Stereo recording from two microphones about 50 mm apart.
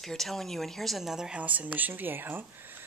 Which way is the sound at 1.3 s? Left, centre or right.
Right.